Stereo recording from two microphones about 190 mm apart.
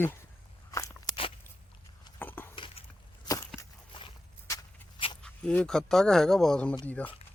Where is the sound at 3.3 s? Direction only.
15° left (ahead or behind).